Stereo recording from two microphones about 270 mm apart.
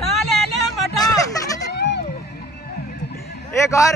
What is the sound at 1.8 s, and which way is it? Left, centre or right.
Music, left.